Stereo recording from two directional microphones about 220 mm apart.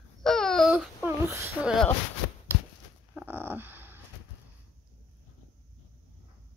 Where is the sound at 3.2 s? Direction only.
10° right (ahead or behind).